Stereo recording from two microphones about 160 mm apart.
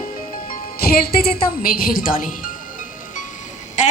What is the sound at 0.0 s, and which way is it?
Music, 65° left (ahead or behind).